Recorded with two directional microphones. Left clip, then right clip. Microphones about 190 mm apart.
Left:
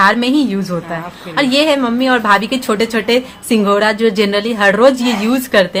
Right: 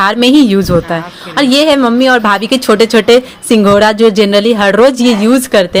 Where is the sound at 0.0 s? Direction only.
40° right (ahead or behind).